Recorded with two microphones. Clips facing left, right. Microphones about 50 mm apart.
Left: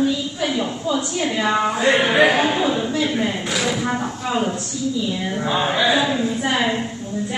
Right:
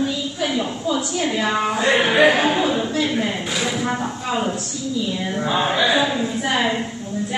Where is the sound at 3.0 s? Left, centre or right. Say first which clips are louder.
Even; centre.